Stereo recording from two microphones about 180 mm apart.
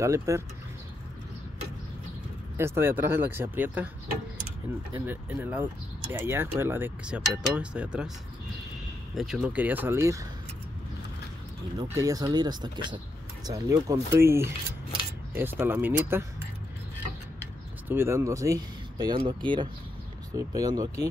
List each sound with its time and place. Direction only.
0.0 s speech: 15° right (ahead or behind)
2.5 s speech: 15° right (ahead or behind)
4.9 s speech: 10° right (ahead or behind)
9.1 s speech: centre (ahead or behind)
11.9 s speech: 20° right (ahead or behind)
17.8 s speech: 15° right (ahead or behind)